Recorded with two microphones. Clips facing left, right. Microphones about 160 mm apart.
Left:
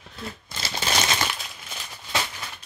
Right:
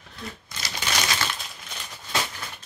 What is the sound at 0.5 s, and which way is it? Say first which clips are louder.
Crumpling: left 3 dB; 30° left (ahead or behind).